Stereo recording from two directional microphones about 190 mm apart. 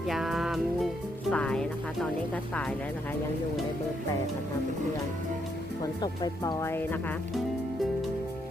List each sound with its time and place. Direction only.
0.1 s music: centre (ahead or behind)
1.3 s speech: 5° left (ahead or behind)
5.8 s speech: 20° left (ahead or behind)